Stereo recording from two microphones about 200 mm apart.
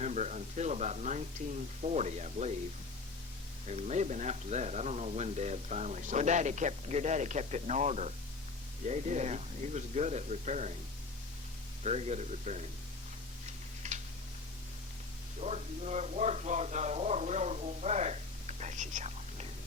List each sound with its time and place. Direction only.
0.0 s speech: 35° right (ahead or behind)
3.7 s speech: 35° right (ahead or behind)
11.8 s speech: 35° right (ahead or behind)
13.8 s tick-tock: 35° right (ahead or behind)
15.4 s speech: 35° right (ahead or behind)